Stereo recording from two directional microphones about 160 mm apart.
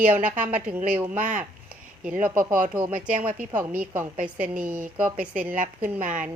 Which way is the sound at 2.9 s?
55° right (ahead or behind).